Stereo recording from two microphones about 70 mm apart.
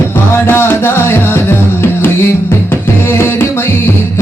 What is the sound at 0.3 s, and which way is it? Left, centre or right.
Music, left.